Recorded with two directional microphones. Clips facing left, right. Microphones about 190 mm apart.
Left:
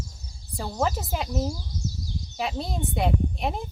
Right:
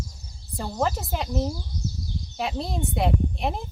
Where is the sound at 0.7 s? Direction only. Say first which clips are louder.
Right 1 dB; 5° left (ahead or behind).